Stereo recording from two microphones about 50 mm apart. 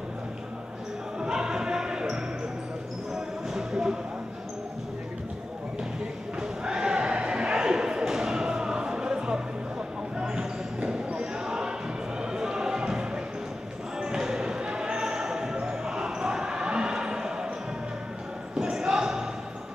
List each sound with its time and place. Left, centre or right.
1.2 s basketball bounce: centre
3.5 s a sound: centre
6.4 s a sound: centre
10.1 s basketball bounce: centre
12.2 s music: centre
13.9 s basketball bounce: centre
18.6 s basketball bounce: centre